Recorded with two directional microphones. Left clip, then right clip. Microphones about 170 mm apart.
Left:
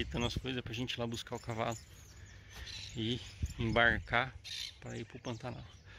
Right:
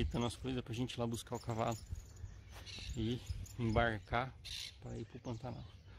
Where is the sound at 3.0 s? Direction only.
5° right (ahead or behind).